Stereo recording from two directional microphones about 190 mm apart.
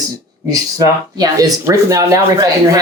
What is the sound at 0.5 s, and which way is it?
Speech, 20° right (ahead or behind).